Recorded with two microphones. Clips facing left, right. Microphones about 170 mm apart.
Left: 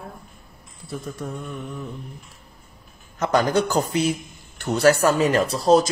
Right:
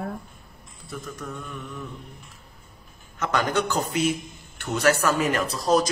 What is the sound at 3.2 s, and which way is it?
A man's voice, 35° left (ahead or behind).